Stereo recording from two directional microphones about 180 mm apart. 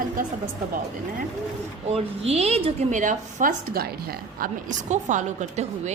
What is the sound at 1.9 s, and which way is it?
A woman's voice, 35° right (ahead or behind).